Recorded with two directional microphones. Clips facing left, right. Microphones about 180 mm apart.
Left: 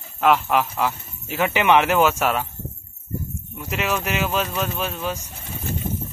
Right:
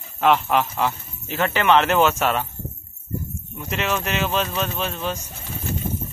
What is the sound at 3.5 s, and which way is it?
A man's voice, 10° left (ahead or behind).